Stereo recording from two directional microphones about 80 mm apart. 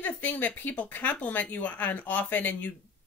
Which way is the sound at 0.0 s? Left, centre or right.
Left.